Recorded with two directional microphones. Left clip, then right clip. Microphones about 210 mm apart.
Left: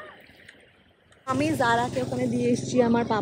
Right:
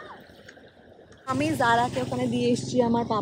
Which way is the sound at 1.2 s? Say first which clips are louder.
Even; centre (ahead or behind).